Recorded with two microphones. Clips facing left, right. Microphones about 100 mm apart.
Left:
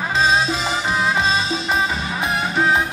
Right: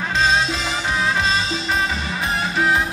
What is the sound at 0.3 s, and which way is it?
Music, 15° left (ahead or behind).